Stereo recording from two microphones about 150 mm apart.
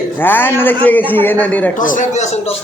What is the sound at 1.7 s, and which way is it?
Speech, 60° left (ahead or behind).